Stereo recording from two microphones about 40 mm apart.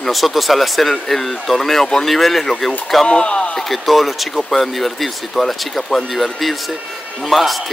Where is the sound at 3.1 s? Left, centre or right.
Left.